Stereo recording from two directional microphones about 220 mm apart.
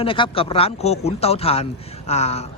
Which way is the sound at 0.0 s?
25° left (ahead or behind).